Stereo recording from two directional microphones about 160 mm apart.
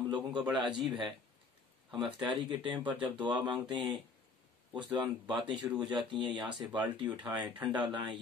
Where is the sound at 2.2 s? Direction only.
30° right (ahead or behind).